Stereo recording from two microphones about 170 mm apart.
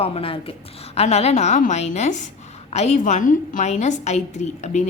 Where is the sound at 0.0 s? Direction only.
35° left (ahead or behind).